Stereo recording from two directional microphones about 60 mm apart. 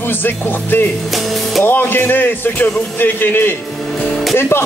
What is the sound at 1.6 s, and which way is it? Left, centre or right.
Speech, left.